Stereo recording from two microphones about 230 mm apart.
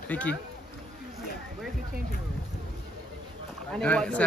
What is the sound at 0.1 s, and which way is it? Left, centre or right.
Speech, centre.